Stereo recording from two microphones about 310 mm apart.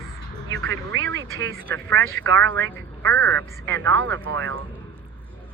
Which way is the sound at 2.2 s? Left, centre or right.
Right.